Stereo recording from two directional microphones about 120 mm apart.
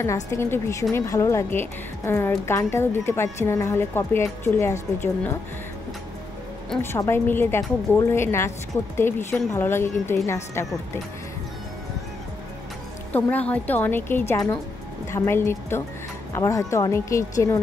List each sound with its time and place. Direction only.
0.0 s a woman's voice: 25° left (ahead or behind)
6.8 s a woman's voice: 20° left (ahead or behind)
13.1 s a woman's voice: 15° left (ahead or behind)